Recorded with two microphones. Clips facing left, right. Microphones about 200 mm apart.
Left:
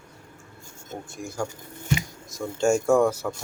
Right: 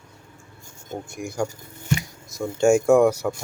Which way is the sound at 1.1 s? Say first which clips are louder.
Right 4 dB; 15° right (ahead or behind).